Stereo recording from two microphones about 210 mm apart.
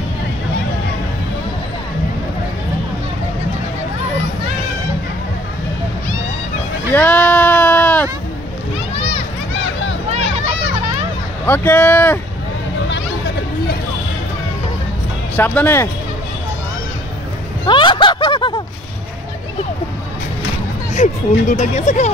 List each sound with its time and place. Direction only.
6.9 s sheep: 5° left (ahead or behind)
11.4 s speech: 10° left (ahead or behind)
15.3 s speech: 10° left (ahead or behind)
17.6 s a sound: 25° left (ahead or behind)
20.9 s speech: 35° left (ahead or behind)